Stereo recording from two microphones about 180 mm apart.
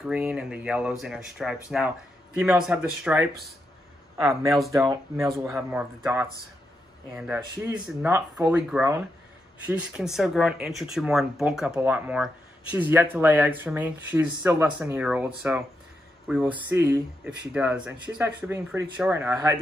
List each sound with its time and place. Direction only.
0.0 s speech: 5° right (ahead or behind)
4.2 s speech: 15° right (ahead or behind)